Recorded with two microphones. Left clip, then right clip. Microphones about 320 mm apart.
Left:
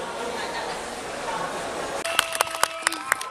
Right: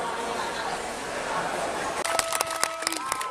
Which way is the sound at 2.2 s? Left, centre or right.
Left.